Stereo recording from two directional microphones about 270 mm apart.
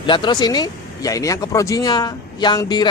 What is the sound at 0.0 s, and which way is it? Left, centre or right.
Speech, centre.